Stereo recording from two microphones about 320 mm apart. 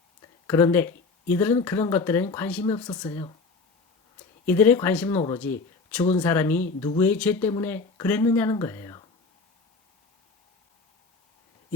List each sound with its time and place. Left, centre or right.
0.4 s speech: centre
4.4 s speech: centre